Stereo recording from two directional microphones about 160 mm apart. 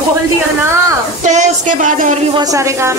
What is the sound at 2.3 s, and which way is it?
Speech, 20° right (ahead or behind).